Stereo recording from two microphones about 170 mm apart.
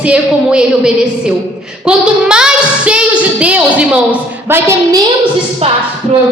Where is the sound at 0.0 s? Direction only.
5° right (ahead or behind).